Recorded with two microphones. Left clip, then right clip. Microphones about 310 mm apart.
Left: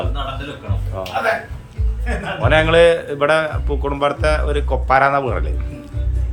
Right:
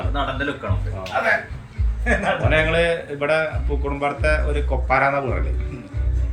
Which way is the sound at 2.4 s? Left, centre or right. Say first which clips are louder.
Left 9 dB; centre.